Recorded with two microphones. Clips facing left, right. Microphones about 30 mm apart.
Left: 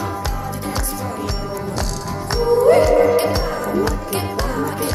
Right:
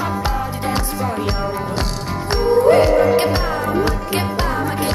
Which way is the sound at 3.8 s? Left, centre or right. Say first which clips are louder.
Right 2 dB; right.